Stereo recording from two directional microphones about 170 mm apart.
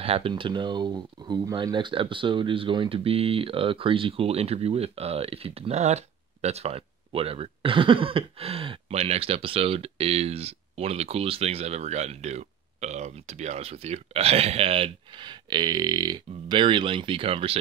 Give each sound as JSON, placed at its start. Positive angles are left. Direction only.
{"t": 0.0, "sound": "speech", "side_deg": -35}